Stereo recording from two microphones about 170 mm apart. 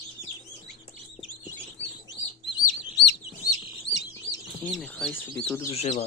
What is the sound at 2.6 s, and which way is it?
Chirp, 75° left (ahead or behind).